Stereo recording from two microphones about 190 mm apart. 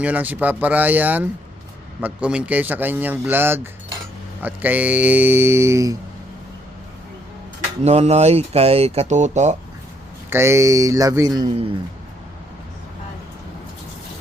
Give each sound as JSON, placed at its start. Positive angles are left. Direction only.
{"t": 0.0, "sound": "speech", "side_deg": -10}
{"t": 7.9, "sound": "speech", "side_deg": -35}
{"t": 10.2, "sound": "speech", "side_deg": -15}